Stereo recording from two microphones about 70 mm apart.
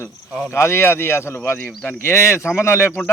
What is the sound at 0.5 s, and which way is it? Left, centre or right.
Speech, left.